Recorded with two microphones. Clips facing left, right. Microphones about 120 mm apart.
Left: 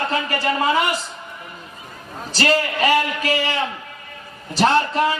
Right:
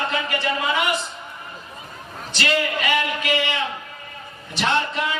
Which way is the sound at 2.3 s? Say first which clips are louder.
Left 3 dB; 35° left (ahead or behind).